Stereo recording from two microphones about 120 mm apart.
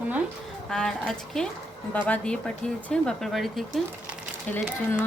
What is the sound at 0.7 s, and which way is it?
Speech, 5° left (ahead or behind).